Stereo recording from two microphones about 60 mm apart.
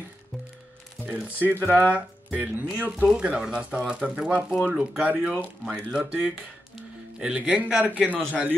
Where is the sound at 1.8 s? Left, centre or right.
Right.